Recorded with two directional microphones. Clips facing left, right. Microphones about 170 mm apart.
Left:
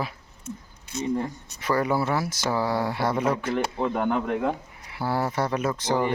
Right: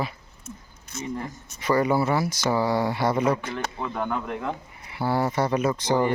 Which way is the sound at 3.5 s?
30° left (ahead or behind).